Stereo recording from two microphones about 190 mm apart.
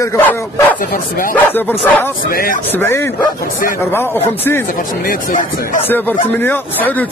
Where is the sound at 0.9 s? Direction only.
45° left (ahead or behind).